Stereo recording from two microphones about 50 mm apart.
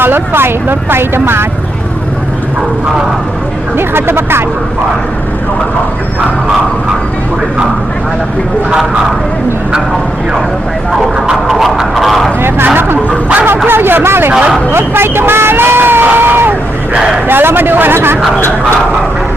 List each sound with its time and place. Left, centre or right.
0.0 s speech: right
3.8 s speech: right
11.4 s a sound: centre
12.4 s a sound: right
12.6 s vehicle: right
13.7 s speech: right